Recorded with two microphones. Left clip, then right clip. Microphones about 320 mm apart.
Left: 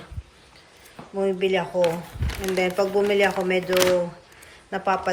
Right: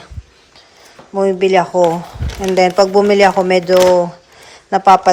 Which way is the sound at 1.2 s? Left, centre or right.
Centre.